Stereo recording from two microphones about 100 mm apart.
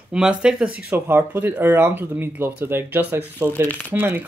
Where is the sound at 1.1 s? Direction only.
20° right (ahead or behind).